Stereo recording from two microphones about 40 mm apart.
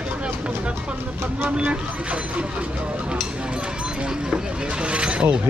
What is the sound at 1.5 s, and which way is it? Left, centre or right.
Speech, right.